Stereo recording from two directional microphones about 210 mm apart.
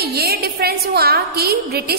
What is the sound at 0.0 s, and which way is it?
A woman's voice, 50° right (ahead or behind).